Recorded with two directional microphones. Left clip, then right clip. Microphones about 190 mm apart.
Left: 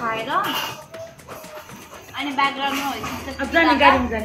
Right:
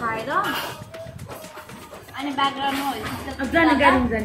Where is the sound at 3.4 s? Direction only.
55° right (ahead or behind).